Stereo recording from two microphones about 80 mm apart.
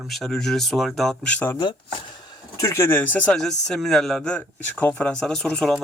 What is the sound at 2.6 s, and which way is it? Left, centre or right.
Speech, left.